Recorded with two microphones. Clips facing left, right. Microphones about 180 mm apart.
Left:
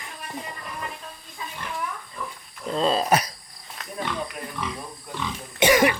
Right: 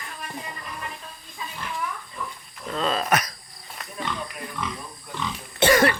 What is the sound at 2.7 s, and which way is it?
Speech, 30° left (ahead or behind).